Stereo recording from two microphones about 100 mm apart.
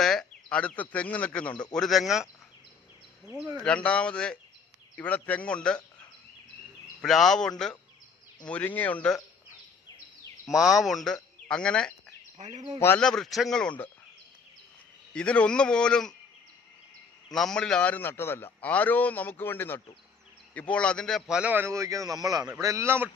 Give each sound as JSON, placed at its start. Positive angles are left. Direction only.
{"t": 0.0, "sound": "a sound", "side_deg": 5}
{"t": 0.5, "sound": "a man's voice", "side_deg": 10}
{"t": 3.2, "sound": "a man's voice", "side_deg": -10}
{"t": 3.6, "sound": "a man's voice", "side_deg": 10}
{"t": 7.0, "sound": "a man's voice", "side_deg": 0}
{"t": 10.4, "sound": "speech", "side_deg": -5}
{"t": 13.0, "sound": "a man's voice", "side_deg": 5}
{"t": 15.1, "sound": "a man's voice", "side_deg": 10}
{"t": 17.3, "sound": "a man's voice", "side_deg": 5}
{"t": 21.2, "sound": "a man's voice", "side_deg": -10}
{"t": 21.5, "sound": "a man's voice", "side_deg": -25}